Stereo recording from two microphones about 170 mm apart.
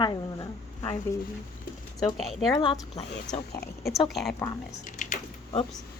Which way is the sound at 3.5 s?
65° left (ahead or behind).